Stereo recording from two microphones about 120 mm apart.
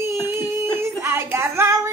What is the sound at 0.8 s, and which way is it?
Child singing, 20° right (ahead or behind).